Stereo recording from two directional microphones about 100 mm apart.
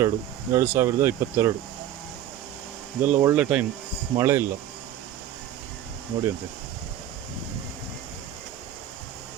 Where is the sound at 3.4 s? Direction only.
10° right (ahead or behind).